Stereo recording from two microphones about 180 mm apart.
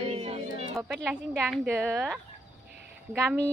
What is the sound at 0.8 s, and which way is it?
A woman's voice, 10° right (ahead or behind).